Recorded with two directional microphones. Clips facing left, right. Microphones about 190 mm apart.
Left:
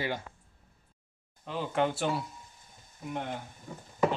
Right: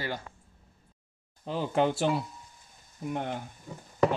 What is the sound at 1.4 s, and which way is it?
Speech, 30° right (ahead or behind).